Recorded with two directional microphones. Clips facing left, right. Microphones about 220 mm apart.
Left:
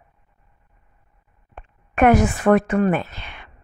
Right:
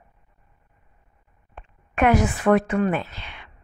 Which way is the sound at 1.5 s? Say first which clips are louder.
Left 3 dB; 50° left (ahead or behind).